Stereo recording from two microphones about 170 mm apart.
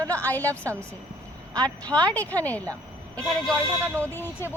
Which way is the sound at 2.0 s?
10° left (ahead or behind).